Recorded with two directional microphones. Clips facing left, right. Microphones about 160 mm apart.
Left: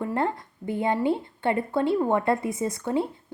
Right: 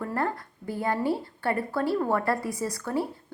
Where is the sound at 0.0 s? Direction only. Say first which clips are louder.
Left 3 dB; 20° left (ahead or behind).